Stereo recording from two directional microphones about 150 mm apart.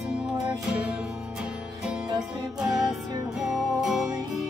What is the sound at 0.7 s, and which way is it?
Music, 5° right (ahead or behind).